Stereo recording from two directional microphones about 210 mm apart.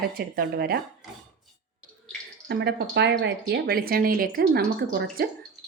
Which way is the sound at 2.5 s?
50° right (ahead or behind).